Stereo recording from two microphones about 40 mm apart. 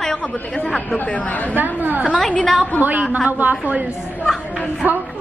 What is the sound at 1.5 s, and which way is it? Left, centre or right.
A woman's voice, right.